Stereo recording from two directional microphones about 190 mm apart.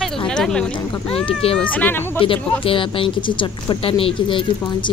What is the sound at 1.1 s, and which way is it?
Speech, 30° left (ahead or behind).